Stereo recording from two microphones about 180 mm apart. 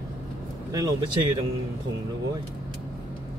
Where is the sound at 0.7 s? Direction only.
25° right (ahead or behind).